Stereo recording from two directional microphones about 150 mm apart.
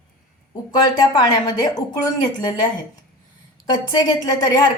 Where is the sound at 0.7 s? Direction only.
30° left (ahead or behind).